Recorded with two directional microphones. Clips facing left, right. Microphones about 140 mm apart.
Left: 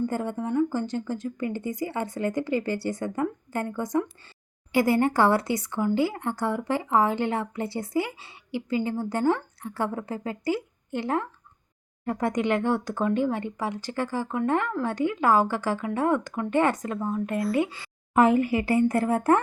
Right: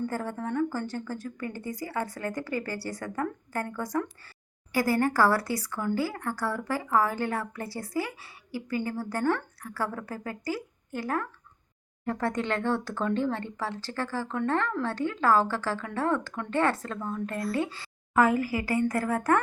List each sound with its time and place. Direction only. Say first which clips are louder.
0.1 s speech: left 4 dB; 20° left (ahead or behind)